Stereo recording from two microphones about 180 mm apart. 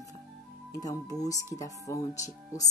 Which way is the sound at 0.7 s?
20° left (ahead or behind).